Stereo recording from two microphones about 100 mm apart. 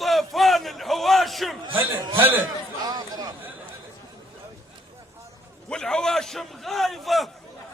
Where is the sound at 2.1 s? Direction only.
20° right (ahead or behind).